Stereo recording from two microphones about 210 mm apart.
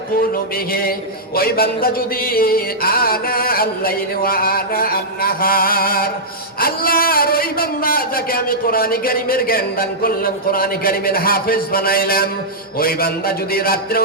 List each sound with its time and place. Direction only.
0.7 s speech: 45° left (ahead or behind)